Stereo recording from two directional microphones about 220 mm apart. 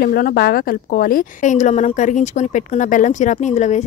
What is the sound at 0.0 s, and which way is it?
Speech, 40° left (ahead or behind).